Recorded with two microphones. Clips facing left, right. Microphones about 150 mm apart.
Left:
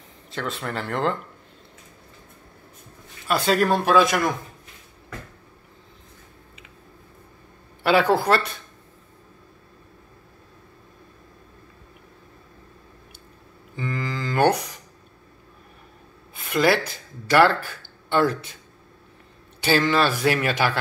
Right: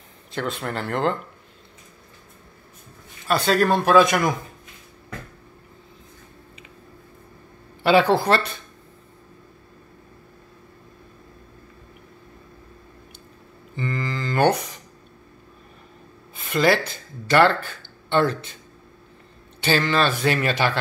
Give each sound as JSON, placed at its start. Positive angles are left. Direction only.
{"t": 0.3, "sound": "speech", "side_deg": 0}
{"t": 3.3, "sound": "speech", "side_deg": 5}
{"t": 7.8, "sound": "speech", "side_deg": 0}
{"t": 13.7, "sound": "a man's voice", "side_deg": 5}
{"t": 16.4, "sound": "a sound", "side_deg": 5}
{"t": 17.3, "sound": "a man's voice", "side_deg": 10}
{"t": 19.6, "sound": "a man's voice", "side_deg": 10}